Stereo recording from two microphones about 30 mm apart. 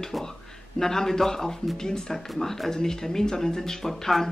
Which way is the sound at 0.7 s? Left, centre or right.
Centre.